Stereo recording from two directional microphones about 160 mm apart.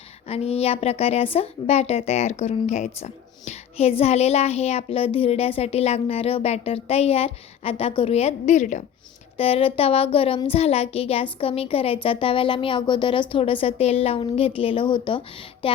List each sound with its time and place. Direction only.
0.3 s speech: 40° left (ahead or behind)
9.4 s speech: 35° left (ahead or behind)
15.6 s music: 35° left (ahead or behind)